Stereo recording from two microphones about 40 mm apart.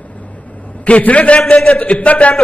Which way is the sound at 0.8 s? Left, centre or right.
Left.